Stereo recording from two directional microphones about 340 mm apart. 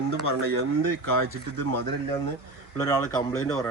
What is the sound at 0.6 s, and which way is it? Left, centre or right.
Speech, right.